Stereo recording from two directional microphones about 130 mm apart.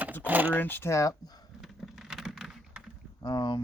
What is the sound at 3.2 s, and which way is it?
Speech, 35° left (ahead or behind).